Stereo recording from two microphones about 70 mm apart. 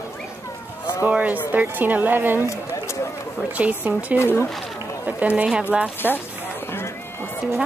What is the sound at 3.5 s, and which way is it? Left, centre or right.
Speech, right.